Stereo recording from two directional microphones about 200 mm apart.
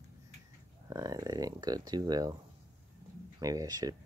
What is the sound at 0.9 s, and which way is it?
Speech, 15° right (ahead or behind).